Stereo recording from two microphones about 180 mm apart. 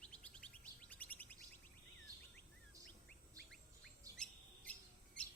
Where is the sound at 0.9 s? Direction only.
10° left (ahead or behind).